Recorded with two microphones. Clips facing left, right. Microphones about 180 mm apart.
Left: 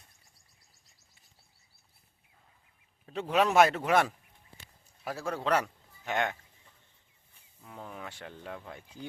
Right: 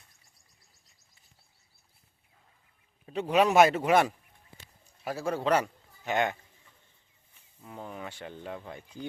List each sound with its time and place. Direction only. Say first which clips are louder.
3.1 s speech: right 3 dB; centre (ahead or behind)
7.6 s speech: right 3 dB; 5° right (ahead or behind)